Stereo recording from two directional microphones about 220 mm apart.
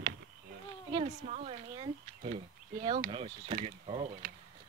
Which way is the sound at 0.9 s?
30° right (ahead or behind).